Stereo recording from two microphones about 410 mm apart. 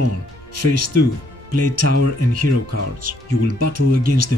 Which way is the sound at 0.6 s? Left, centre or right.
Right.